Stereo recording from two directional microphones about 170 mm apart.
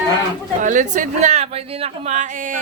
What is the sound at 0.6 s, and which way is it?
Speech, 50° right (ahead or behind).